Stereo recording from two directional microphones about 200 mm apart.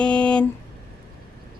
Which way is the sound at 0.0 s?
5° left (ahead or behind).